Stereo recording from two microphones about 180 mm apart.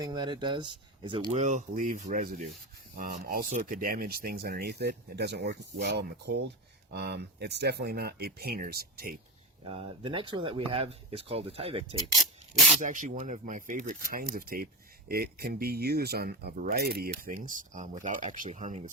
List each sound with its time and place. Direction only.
0.0 s speech: 25° right (ahead or behind)
1.3 s speech: 40° right (ahead or behind); by 9.1 s 60° right (ahead or behind)
9.6 s speech: 30° right (ahead or behind)
12.1 s rub: centre (ahead or behind)
12.8 s speech: 45° right (ahead or behind)